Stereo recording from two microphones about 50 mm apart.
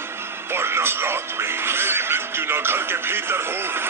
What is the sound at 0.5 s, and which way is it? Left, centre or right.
Speech, right.